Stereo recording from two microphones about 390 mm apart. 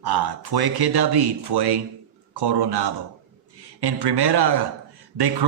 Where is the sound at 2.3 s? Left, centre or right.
Right.